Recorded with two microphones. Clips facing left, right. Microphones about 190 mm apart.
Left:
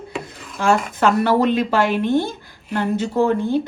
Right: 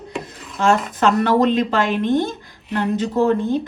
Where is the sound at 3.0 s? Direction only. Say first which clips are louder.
Right 1 dB; 15° left (ahead or behind).